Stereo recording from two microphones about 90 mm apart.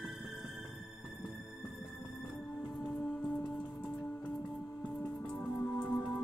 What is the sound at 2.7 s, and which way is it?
Music, 5° left (ahead or behind).